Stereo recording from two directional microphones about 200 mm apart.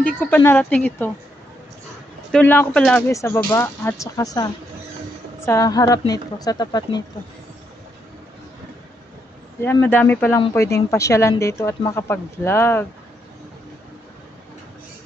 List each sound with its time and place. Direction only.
0.0 s speech: 10° left (ahead or behind)
2.3 s speech: 10° left (ahead or behind)
9.6 s speech: 10° left (ahead or behind)